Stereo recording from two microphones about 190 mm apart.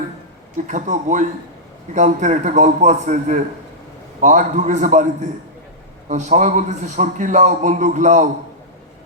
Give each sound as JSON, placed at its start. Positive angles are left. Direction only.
{"t": 0.5, "sound": "a man's voice", "side_deg": -40}
{"t": 6.1, "sound": "a man's voice", "side_deg": -40}